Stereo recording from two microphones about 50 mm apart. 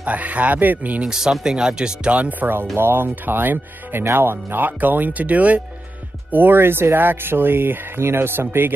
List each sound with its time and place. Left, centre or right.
0.0 s speech: right
1.0 s speech: centre
2.0 s speech: right
6.3 s speech: right